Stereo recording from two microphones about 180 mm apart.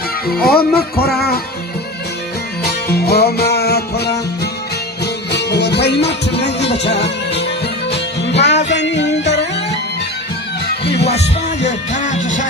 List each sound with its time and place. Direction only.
0.3 s music: 55° left (ahead or behind)
2.6 s music: 65° left (ahead or behind)
5.3 s music: 70° left (ahead or behind)
7.9 s music: 35° left (ahead or behind)
8.4 s music: 70° left (ahead or behind)
11.6 s music: 40° left (ahead or behind)